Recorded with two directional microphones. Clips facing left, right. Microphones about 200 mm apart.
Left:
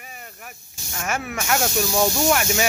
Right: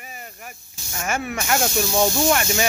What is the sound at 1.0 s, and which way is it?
Speech, centre (ahead or behind).